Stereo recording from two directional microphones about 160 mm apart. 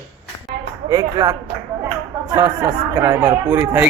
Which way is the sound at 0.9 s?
20° right (ahead or behind).